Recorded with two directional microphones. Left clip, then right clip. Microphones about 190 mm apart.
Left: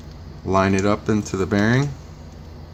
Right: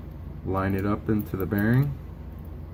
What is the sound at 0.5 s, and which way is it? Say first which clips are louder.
Speech: left 9 dB; 60° left (ahead or behind).